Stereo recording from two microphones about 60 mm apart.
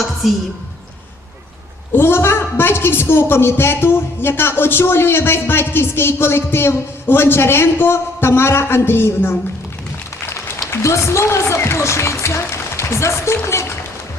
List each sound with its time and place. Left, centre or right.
1.9 s a woman's voice: left
10.7 s speech: left